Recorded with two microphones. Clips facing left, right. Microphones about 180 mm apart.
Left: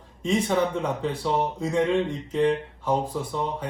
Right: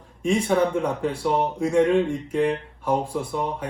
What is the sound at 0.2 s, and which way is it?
Speech, 15° right (ahead or behind).